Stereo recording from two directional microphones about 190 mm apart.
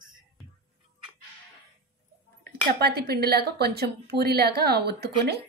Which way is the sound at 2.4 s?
55° right (ahead or behind).